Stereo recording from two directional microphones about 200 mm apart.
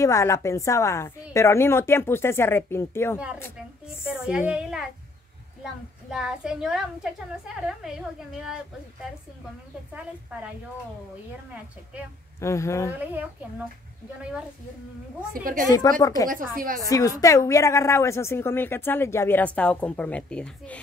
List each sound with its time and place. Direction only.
0.0 s a woman's voice: 15° left (ahead or behind)
4.0 s a child's voice: 5° right (ahead or behind)
12.4 s a woman's voice: 15° left (ahead or behind)
13.0 s a woman's voice: 10° right (ahead or behind)
15.3 s a woman's voice: 45° right (ahead or behind)
16.0 s a woman's voice: 15° left (ahead or behind)
16.3 s a woman's voice: 45° right (ahead or behind)
16.9 s a woman's voice: 15° left (ahead or behind)